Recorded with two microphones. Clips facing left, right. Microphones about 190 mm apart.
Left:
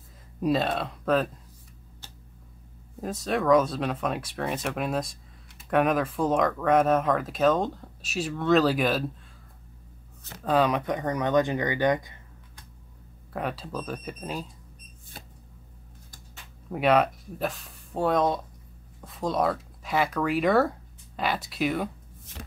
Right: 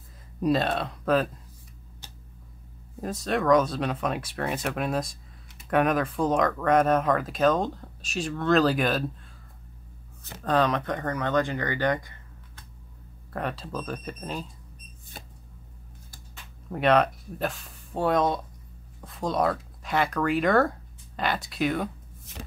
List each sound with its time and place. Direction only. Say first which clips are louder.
0.4 s speech: right 1 dB; centre (ahead or behind)
2.0 s a sound: right 1 dB; 15° right (ahead or behind)
3.0 s speech: even; centre (ahead or behind)
10.4 s speech: left 1 dB; 5° left (ahead or behind)
13.3 s speech: even; 5° left (ahead or behind)
16.7 s speech: even; 5° left (ahead or behind)